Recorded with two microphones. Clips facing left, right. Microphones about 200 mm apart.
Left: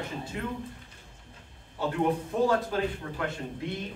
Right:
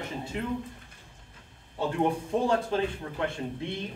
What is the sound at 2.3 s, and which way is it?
Speech, 25° right (ahead or behind).